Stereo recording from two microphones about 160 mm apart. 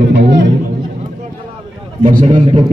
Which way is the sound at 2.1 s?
55° right (ahead or behind).